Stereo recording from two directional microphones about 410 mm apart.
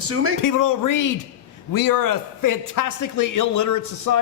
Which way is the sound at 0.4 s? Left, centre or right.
Left.